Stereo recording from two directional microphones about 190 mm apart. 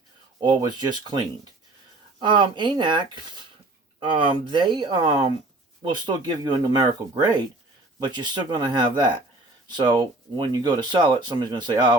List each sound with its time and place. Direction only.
0.4 s speech: 25° right (ahead or behind)
2.2 s speech: 25° right (ahead or behind)